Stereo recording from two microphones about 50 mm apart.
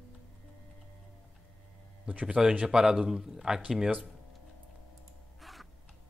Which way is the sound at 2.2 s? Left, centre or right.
Centre.